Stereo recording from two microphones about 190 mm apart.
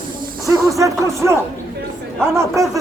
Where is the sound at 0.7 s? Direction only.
15° right (ahead or behind).